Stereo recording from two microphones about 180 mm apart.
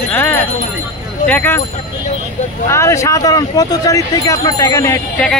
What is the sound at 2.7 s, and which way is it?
Speech, 15° left (ahead or behind).